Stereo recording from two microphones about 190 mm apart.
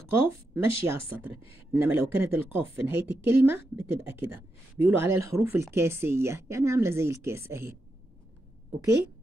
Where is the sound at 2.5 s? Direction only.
10° right (ahead or behind).